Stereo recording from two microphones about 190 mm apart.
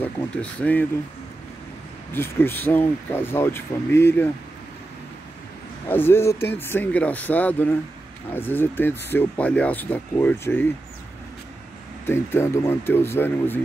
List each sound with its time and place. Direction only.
0.0 s speech: 5° left (ahead or behind)
2.1 s speech: 10° left (ahead or behind)
5.9 s speech: 10° left (ahead or behind)
12.1 s speech: 10° left (ahead or behind)